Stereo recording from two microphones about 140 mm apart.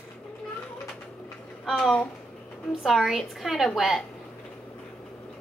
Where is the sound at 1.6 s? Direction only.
Centre (ahead or behind).